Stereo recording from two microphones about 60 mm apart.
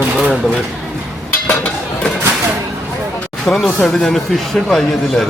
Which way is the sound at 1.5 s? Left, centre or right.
Left.